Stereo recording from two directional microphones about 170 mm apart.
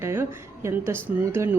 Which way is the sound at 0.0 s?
15° right (ahead or behind).